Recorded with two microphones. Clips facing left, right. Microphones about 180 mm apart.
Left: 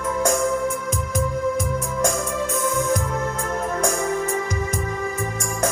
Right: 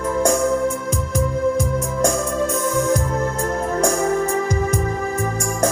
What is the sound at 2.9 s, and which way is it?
Music, 35° right (ahead or behind).